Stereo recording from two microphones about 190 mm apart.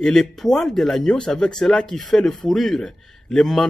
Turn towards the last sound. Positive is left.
turn(degrees=5)  # may be behind; listen again after turning